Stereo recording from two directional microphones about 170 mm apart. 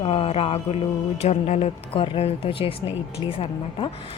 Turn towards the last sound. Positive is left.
turn(degrees=30)  # may be behind; listen again after turning